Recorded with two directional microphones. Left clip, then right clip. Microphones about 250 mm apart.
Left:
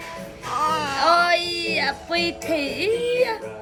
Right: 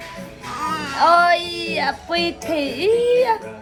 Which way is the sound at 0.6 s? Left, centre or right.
Centre.